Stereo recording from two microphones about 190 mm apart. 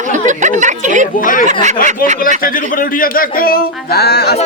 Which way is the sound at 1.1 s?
45° left (ahead or behind).